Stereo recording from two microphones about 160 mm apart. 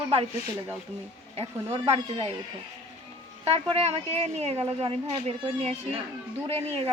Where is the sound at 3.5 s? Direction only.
40° right (ahead or behind).